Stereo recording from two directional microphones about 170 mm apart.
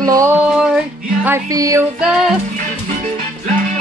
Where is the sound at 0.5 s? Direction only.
5° right (ahead or behind).